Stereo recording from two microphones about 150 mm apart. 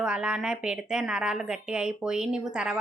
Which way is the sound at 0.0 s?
5° right (ahead or behind).